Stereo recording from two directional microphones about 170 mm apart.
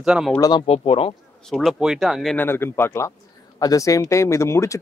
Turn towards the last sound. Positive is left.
turn(degrees=15)  # may be behind; listen again after turning